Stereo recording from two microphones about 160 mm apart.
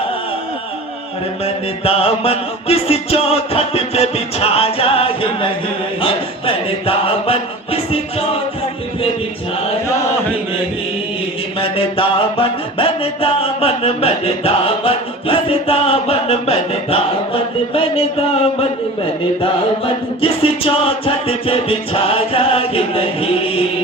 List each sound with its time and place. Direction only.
1.5 s music: 40° left (ahead or behind)
6.0 s chant: 35° left (ahead or behind)
11.8 s music: 35° left (ahead or behind)